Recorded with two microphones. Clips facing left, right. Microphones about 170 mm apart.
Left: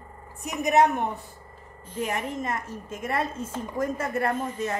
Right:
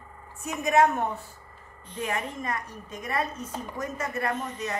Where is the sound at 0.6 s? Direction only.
15° left (ahead or behind).